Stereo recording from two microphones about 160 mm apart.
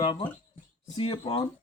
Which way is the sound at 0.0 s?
30° left (ahead or behind).